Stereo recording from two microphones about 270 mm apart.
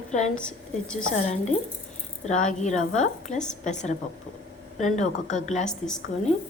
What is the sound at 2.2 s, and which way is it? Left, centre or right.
A woman's voice, left.